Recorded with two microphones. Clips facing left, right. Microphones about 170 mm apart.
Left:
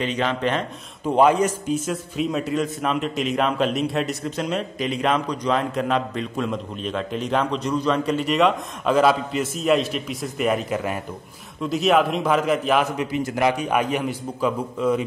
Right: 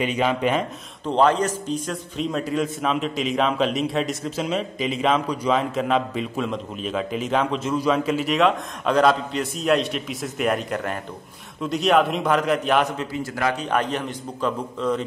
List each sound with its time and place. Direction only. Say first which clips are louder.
0.0 s speech: right 1 dB; 10° right (ahead or behind)
1.0 s a man's voice: left 2 dB; 10° left (ahead or behind)
12.9 s a man's voice: left 4 dB; 15° left (ahead or behind)